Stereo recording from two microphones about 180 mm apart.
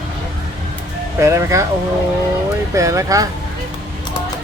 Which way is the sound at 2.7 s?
15° right (ahead or behind).